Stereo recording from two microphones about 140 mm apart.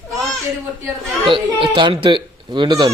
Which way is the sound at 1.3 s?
35° right (ahead or behind).